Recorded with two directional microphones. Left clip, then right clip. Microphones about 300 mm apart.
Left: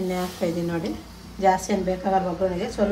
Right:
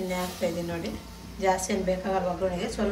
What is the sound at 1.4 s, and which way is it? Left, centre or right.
Speech, left.